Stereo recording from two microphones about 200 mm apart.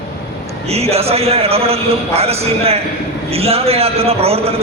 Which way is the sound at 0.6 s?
30° right (ahead or behind).